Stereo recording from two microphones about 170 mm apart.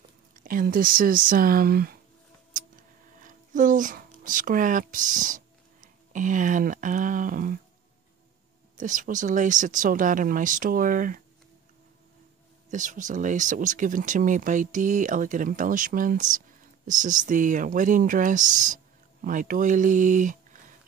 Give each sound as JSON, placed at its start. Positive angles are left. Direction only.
{"t": 0.4, "sound": "speech", "side_deg": -55}
{"t": 2.5, "sound": "a sound", "side_deg": -50}
{"t": 8.7, "sound": "speech", "side_deg": -50}
{"t": 12.7, "sound": "speech", "side_deg": -50}